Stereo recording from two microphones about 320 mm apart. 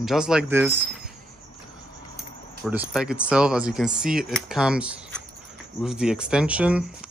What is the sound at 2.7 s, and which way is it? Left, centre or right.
Speech, centre.